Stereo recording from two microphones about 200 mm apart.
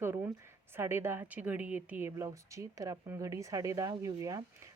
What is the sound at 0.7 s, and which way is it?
Speech, 10° right (ahead or behind).